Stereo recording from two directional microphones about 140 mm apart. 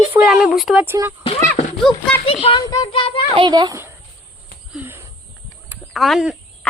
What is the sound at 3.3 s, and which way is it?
Speech, 30° right (ahead or behind).